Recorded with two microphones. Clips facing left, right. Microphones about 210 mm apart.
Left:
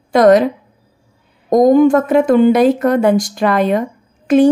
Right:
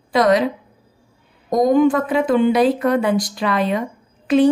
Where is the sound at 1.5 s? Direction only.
45° left (ahead or behind).